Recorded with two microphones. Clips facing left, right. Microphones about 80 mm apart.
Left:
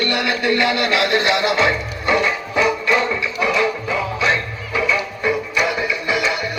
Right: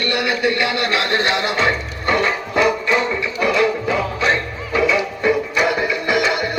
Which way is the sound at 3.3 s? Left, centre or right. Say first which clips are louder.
Right 3 dB; right.